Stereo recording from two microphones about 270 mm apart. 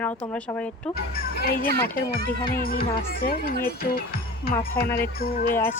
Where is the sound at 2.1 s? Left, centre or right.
Left.